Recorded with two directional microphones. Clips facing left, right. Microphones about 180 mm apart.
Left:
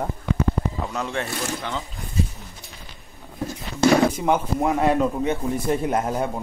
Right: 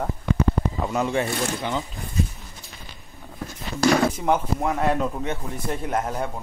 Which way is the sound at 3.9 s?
Centre (ahead or behind).